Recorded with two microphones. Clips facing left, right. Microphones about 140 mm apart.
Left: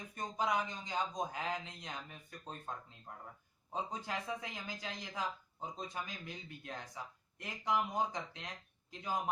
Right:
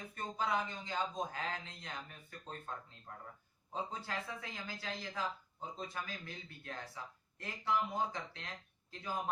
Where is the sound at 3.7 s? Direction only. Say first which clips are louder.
Left 1 dB; 15° left (ahead or behind).